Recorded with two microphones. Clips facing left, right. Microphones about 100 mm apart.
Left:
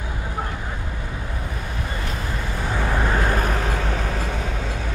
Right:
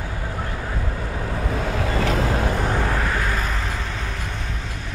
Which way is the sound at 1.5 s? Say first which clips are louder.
Right 7 dB; 90° right.